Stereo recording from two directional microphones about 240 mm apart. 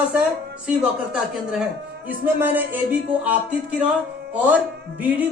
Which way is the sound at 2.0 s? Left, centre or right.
Centre.